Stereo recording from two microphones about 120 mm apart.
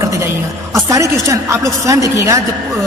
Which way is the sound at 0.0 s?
25° right (ahead or behind).